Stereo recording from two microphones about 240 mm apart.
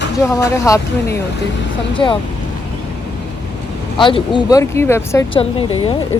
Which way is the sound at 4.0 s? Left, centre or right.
Left.